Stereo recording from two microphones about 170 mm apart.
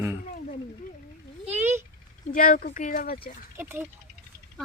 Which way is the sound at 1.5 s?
10° right (ahead or behind).